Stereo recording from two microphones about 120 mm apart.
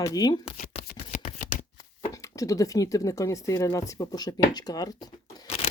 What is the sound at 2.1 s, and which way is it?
Speech, 25° left (ahead or behind).